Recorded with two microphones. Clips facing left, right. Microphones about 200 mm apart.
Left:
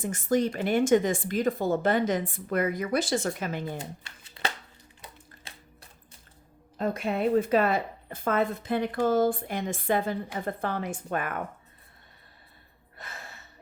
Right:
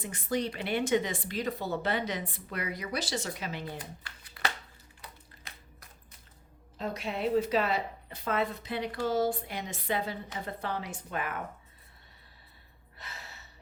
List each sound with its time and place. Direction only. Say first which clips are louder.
0.0 s speech: left 7 dB; 45° left (ahead or behind)
3.8 s shuffling cards: left 5 dB; 25° left (ahead or behind)
5.0 s a sound: left 2 dB; 30° left (ahead or behind)
6.7 s speech: left 6 dB; 50° left (ahead or behind)
13.0 s gasp: left 4 dB; 50° left (ahead or behind)